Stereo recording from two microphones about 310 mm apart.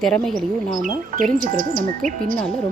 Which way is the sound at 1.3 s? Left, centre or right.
Right.